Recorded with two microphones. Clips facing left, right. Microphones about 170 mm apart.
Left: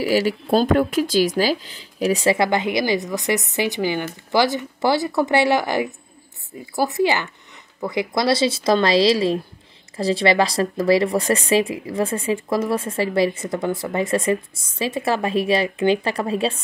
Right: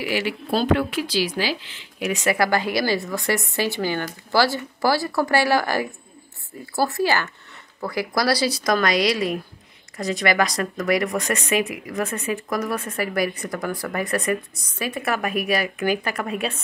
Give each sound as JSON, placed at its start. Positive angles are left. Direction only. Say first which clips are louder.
{"t": 0.0, "sound": "speech", "louder": "left 6 dB", "side_deg": 40}